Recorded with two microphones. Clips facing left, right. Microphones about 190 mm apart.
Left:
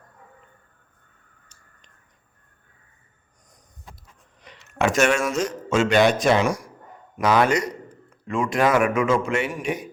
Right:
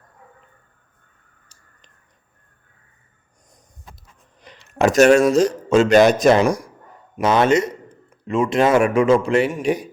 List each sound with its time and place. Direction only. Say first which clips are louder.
4.4 s speech: right 5 dB; 35° right (ahead or behind)
7.2 s a man's voice: right 3 dB; 25° right (ahead or behind)